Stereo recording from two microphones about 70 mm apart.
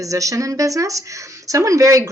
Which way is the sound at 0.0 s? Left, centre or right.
Right.